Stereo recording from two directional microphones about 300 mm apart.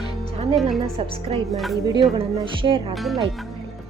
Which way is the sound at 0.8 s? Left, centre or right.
Centre.